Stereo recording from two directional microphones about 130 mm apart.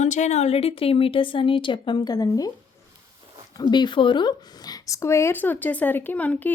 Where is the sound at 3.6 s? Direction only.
35° left (ahead or behind); by 6.5 s 10° left (ahead or behind).